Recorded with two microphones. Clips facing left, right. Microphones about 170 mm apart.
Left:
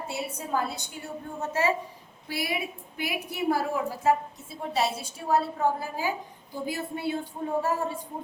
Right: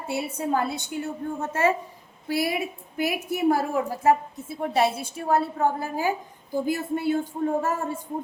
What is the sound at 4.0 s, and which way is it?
A woman's voice, 55° right (ahead or behind).